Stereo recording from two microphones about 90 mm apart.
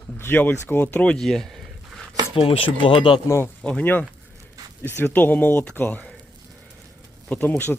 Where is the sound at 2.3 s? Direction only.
85° left.